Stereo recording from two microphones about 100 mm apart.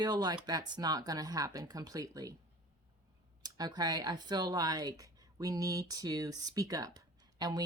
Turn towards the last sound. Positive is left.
turn(degrees=-40)  # may be behind; listen again after turning